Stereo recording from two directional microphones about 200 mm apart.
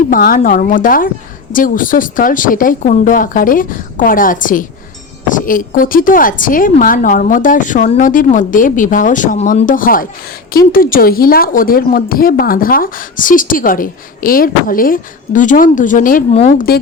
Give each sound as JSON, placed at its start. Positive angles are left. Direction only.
{"t": 0.1, "sound": "a woman's voice", "side_deg": 45}